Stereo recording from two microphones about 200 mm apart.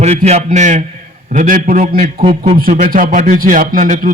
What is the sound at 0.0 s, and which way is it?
A man's voice, 35° right (ahead or behind).